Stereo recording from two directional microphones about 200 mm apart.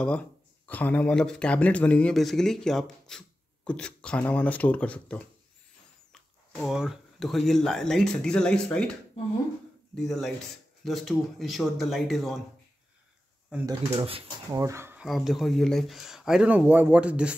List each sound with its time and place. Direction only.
0.7 s speech: 10° left (ahead or behind)
6.5 s speech: centre (ahead or behind)
9.9 s speech: centre (ahead or behind)
13.7 s speech: 30° right (ahead or behind)
14.5 s speech: 15° right (ahead or behind)
15.0 s speech: centre (ahead or behind)